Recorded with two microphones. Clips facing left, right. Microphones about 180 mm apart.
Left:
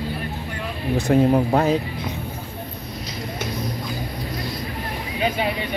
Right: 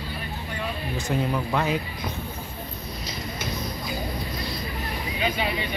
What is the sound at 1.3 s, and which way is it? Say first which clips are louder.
Speech: left 7 dB; 40° left (ahead or behind).